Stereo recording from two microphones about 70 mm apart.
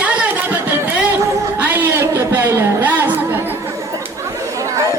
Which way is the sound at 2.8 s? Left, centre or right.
Right.